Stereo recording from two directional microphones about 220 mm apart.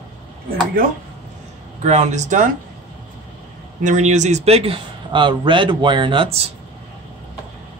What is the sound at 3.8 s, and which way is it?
A man's voice, 30° right (ahead or behind).